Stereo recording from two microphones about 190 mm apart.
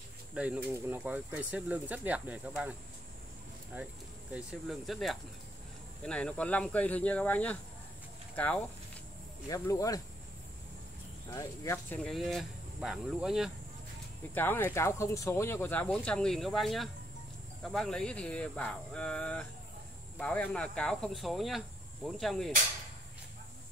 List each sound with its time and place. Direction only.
0.3 s speech: 5° right (ahead or behind)
3.7 s speech: 10° right (ahead or behind); by 8.6 s 5° left (ahead or behind)
9.5 s speech: 15° left (ahead or behind)
11.3 s speech: 15° left (ahead or behind); by 13.5 s centre (ahead or behind)
14.3 s speech: 10° left (ahead or behind)